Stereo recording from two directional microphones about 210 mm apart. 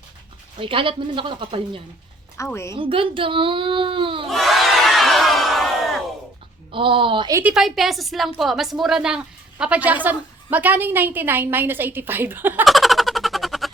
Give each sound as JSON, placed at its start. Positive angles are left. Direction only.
{"t": 0.6, "sound": "speech", "side_deg": -25}
{"t": 2.4, "sound": "a woman's voice", "side_deg": 15}
{"t": 2.7, "sound": "speech", "side_deg": -25}
{"t": 4.3, "sound": "crowd", "side_deg": 0}
{"t": 6.7, "sound": "speech", "side_deg": -25}
{"t": 7.5, "sound": "a woman's voice", "side_deg": 0}